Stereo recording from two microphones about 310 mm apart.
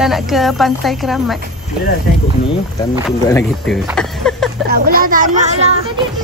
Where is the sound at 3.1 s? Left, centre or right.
Centre.